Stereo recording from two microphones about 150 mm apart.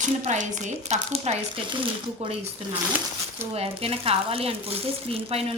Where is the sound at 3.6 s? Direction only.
40° right (ahead or behind).